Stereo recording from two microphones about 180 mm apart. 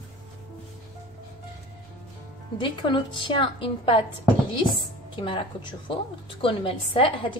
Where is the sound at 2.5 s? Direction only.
25° left (ahead or behind).